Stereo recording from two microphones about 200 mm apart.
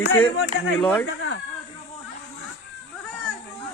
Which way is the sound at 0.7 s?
5° left (ahead or behind).